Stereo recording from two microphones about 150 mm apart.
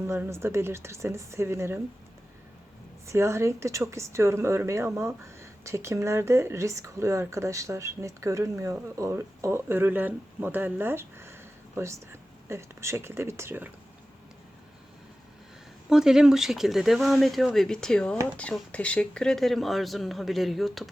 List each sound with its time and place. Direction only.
0.1 s speech: 15° right (ahead or behind)
3.1 s speech: 20° right (ahead or behind)
15.9 s speech: 5° right (ahead or behind)